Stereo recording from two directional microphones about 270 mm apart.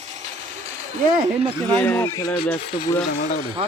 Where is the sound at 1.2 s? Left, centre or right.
Right.